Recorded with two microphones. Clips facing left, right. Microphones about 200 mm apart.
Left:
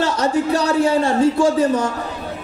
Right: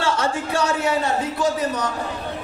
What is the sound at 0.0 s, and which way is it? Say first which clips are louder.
A man's voice: left 5 dB; 40° left (ahead or behind).